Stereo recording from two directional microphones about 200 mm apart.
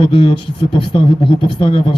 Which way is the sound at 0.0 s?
25° left (ahead or behind).